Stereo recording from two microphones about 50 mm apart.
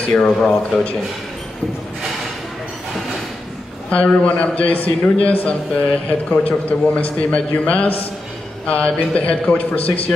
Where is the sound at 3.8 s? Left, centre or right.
Left.